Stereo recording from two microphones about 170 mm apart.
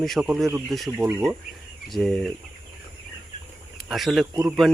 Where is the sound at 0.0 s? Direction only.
Centre (ahead or behind).